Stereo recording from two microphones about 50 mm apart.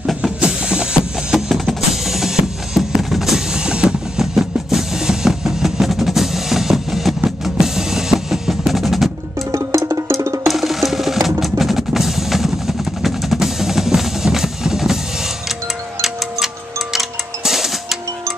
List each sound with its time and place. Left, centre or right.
0.2 s music: centre
7.2 s drum kit: centre
9.5 s music: right
10.5 s music: centre
16.9 s music: centre